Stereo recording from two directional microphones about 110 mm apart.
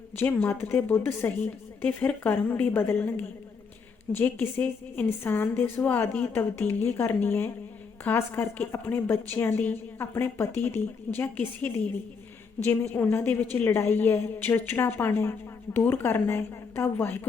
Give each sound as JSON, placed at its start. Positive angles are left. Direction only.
{"t": 0.2, "sound": "a woman's voice", "side_deg": 20}